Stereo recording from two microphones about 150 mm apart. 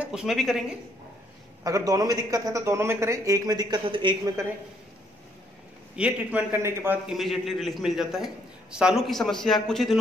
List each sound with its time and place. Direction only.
0.0 s a man's voice: 5° right (ahead or behind)
1.6 s a man's voice: 25° right (ahead or behind)
5.9 s a man's voice: 10° right (ahead or behind)
7.1 s a man's voice: centre (ahead or behind)